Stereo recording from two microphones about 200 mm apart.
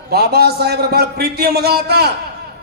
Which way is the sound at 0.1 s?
50° right (ahead or behind).